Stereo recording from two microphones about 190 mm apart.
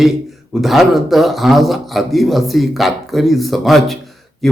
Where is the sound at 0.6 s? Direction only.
Centre (ahead or behind).